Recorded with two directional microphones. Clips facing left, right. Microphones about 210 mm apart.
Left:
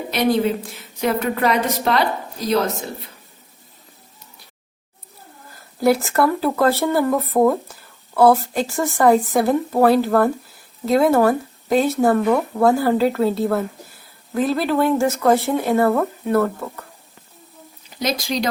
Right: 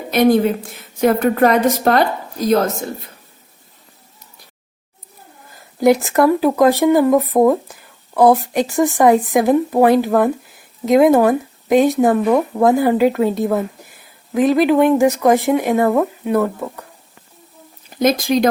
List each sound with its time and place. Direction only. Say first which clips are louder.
0.1 s a woman's voice: right 5 dB; 50° right (ahead or behind)
5.8 s speech: right 4 dB; 15° right (ahead or behind)
17.9 s speech: right 8 dB; 50° right (ahead or behind)